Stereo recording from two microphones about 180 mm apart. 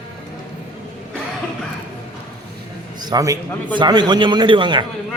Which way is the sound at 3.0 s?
20° right (ahead or behind).